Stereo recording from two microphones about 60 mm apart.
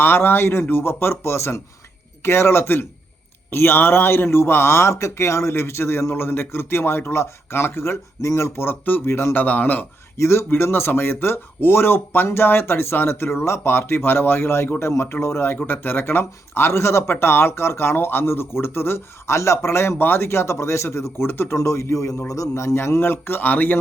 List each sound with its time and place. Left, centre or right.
0.0 s speech: left
10.2 s speech: left
15.6 s speech: left
22.5 s speech: left